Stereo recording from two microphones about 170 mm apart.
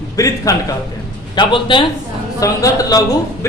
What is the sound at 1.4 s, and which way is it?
A man's voice, 30° left (ahead or behind).